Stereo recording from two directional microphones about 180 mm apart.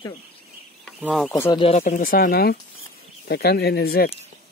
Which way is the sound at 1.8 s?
50° left (ahead or behind).